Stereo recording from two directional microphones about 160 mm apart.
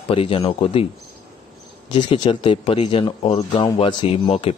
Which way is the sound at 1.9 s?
30° left (ahead or behind).